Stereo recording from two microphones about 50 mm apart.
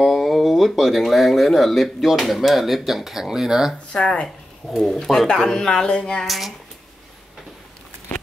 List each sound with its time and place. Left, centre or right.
0.0 s speech: centre
3.9 s speech: centre
4.6 s speech: centre
5.3 s a sound: centre
6.2 s speech: centre